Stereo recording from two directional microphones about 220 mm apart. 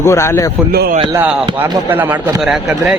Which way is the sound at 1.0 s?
15° right (ahead or behind).